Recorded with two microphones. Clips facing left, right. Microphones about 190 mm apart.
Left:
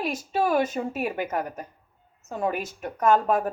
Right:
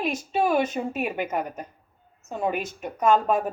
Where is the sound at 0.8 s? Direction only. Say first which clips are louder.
Even; 20° right (ahead or behind).